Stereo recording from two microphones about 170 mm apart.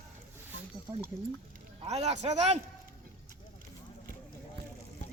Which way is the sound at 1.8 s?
40° right (ahead or behind).